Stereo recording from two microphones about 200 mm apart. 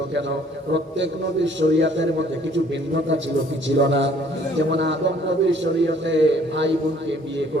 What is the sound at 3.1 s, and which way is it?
A man's voice, 65° right (ahead or behind).